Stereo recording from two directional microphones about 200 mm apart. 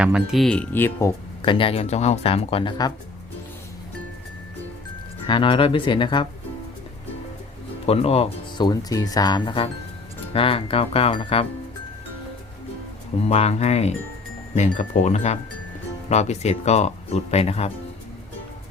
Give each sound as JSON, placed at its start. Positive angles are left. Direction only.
{"t": 0.0, "sound": "speech", "side_deg": -5}
{"t": 1.4, "sound": "speech", "side_deg": 25}
{"t": 5.2, "sound": "speech", "side_deg": 25}
{"t": 7.9, "sound": "speech", "side_deg": 30}
{"t": 13.2, "sound": "speech", "side_deg": 30}